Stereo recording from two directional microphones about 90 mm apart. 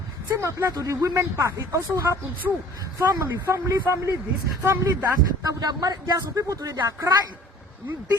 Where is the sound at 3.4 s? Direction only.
30° right (ahead or behind).